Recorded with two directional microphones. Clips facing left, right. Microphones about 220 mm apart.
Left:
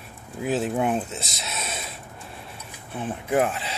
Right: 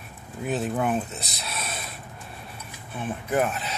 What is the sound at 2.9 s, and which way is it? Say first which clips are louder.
Speech: left 2 dB; 25° left (ahead or behind).